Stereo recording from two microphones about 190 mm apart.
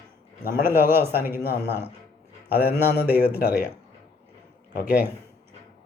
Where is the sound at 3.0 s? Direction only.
10° right (ahead or behind).